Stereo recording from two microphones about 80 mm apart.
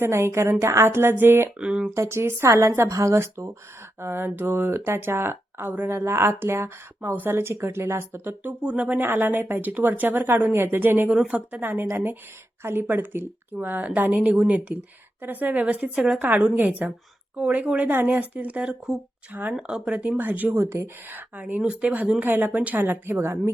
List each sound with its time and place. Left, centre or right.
0.0 s speech: right
1.5 s speech: centre
1.9 s speech: right
8.6 s a woman's voice: centre
11.1 s a woman's voice: centre
19.3 s a woman's voice: right
19.5 s a woman's voice: centre; by 23.4 s right